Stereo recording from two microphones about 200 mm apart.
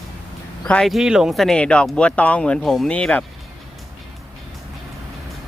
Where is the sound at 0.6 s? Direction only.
5° left (ahead or behind).